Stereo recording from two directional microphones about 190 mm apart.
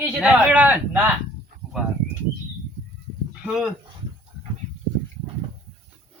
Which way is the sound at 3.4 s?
Centre (ahead or behind).